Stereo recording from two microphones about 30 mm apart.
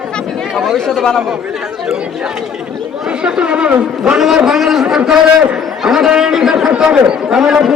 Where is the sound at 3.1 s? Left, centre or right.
Right.